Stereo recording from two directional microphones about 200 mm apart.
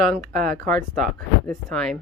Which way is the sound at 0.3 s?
45° right (ahead or behind).